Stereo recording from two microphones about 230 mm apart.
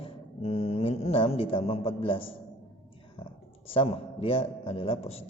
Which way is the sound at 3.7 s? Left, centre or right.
Left.